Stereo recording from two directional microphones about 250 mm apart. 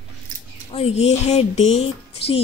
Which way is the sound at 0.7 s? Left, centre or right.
Left.